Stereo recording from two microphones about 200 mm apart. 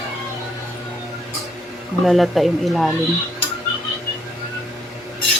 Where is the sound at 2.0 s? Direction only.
Centre (ahead or behind).